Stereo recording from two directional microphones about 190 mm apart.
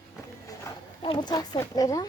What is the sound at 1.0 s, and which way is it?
Speech, 25° left (ahead or behind).